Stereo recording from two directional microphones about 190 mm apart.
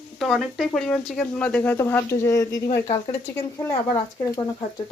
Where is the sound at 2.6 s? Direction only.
45° left (ahead or behind).